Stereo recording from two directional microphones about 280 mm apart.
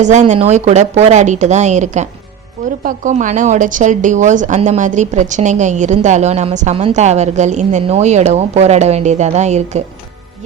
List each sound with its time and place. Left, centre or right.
0.0 s a woman's voice: right